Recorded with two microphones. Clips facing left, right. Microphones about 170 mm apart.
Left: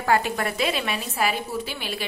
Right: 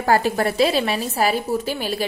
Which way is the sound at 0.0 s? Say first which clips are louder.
Right 4 dB; 40° right (ahead or behind).